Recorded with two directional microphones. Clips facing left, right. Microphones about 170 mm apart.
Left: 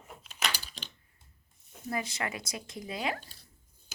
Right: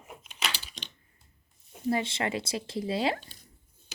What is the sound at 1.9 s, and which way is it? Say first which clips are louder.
Speech: right 6 dB; 25° right (ahead or behind).